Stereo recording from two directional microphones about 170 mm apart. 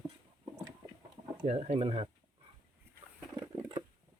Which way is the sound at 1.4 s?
40° right (ahead or behind).